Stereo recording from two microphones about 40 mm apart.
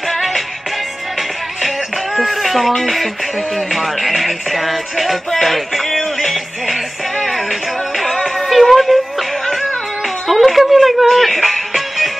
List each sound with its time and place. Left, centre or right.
0.1 s music: centre
2.1 s a sound: centre
3.5 s music: centre
8.5 s music: centre
10.2 s music: centre